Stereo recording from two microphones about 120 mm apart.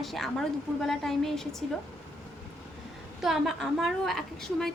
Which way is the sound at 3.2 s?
Centre (ahead or behind).